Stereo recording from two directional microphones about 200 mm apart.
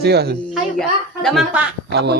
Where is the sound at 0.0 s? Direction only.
55° right (ahead or behind).